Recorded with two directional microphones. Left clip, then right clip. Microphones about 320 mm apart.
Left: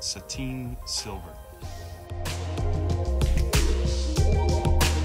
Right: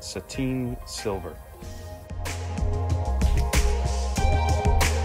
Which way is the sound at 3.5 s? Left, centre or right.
Centre.